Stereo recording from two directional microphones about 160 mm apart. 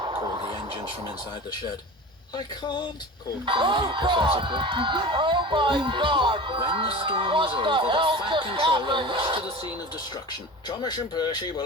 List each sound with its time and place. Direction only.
0.0 s music: 30° right (ahead or behind)
2.3 s speech: 30° left (ahead or behind)
3.4 s speech: 30° right (ahead or behind)
10.7 s speech: 25° left (ahead or behind)